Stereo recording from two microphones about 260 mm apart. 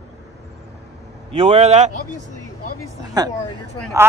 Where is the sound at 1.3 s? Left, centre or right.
Right.